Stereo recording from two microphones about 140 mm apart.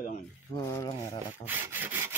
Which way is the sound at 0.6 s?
25° left (ahead or behind).